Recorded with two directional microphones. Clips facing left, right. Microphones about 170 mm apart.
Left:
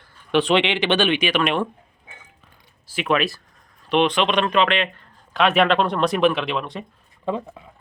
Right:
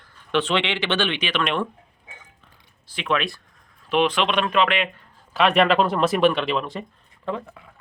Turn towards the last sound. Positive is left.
turn(degrees=20)  # may be behind; listen again after turning